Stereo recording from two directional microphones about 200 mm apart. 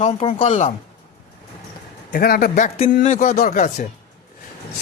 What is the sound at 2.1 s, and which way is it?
Speech, 50° left (ahead or behind).